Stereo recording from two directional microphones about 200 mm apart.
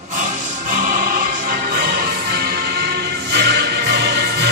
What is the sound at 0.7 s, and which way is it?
Music, 40° right (ahead or behind).